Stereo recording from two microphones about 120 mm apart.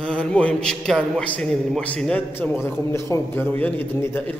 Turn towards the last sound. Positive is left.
turn(degrees=15)  # may be behind; listen again after turning